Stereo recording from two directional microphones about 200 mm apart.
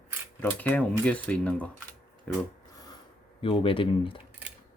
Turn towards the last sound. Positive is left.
turn(degrees=25)  # may be behind; listen again after turning